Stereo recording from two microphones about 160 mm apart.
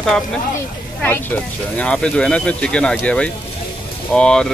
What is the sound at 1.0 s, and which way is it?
Speech, 10° left (ahead or behind).